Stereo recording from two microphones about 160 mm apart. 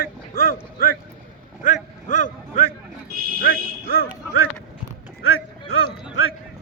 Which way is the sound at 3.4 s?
70° left (ahead or behind).